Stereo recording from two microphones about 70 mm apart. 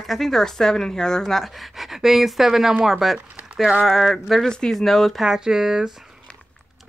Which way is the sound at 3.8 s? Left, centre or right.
Centre.